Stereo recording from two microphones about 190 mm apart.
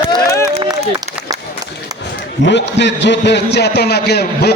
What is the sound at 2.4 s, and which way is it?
A man's voice, 65° left (ahead or behind).